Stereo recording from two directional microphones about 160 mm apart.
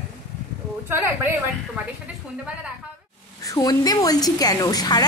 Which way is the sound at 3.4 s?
20° left (ahead or behind).